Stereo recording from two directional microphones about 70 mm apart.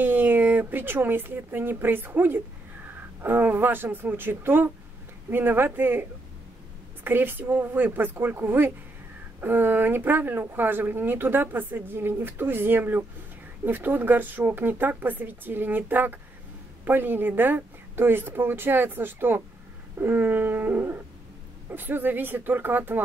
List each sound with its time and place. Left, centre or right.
0.0 s speech: right
7.1 s speech: right